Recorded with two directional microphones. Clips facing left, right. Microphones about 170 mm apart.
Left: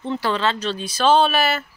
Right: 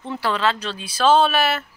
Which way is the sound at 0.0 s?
5° right (ahead or behind).